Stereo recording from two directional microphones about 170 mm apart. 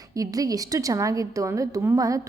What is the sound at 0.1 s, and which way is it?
A woman's voice, 20° right (ahead or behind).